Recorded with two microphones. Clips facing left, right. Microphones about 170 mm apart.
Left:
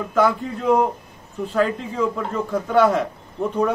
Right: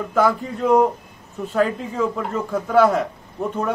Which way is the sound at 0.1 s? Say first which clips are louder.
Even; centre (ahead or behind).